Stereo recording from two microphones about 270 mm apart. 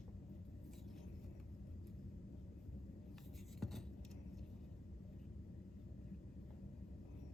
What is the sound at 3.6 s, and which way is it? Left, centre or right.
Vehicle, centre.